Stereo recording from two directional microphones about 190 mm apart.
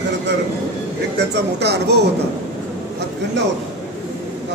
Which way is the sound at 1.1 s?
60° right (ahead or behind).